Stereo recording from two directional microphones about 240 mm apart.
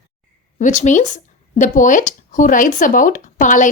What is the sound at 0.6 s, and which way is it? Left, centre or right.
Speech, left.